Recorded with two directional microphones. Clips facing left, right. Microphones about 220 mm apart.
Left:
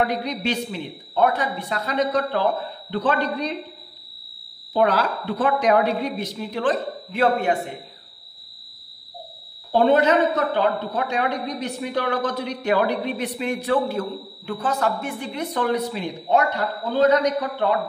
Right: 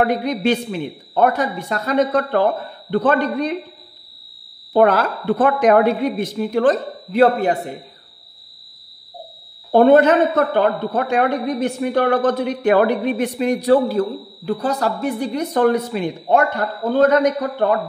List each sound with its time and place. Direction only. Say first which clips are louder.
0.0 s a woman's voice: right 6 dB; 50° right (ahead or behind)
4.7 s a woman's voice: right 5 dB; 50° right (ahead or behind); by 7.7 s 35° right (ahead or behind)
9.7 s a woman's voice: right 6 dB; 50° right (ahead or behind)